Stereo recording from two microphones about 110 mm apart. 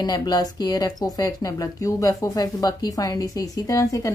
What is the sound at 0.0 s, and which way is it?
A woman's voice, 40° left (ahead or behind).